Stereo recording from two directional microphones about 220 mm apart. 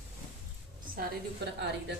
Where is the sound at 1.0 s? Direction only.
50° right (ahead or behind).